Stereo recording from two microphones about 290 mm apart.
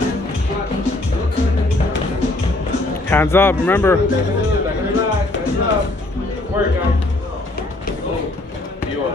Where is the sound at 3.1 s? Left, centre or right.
Centre.